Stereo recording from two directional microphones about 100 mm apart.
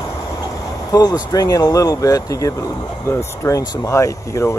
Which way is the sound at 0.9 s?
45° left (ahead or behind).